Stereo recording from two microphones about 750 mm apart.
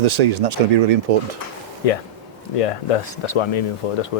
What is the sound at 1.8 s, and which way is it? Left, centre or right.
Speech, left.